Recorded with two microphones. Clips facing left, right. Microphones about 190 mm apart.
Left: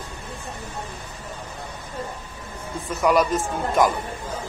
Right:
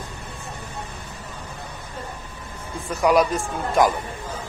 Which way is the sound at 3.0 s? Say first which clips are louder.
Right 1 dB; centre (ahead or behind).